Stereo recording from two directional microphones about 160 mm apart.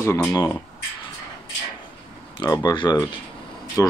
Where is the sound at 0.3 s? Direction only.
25° left (ahead or behind).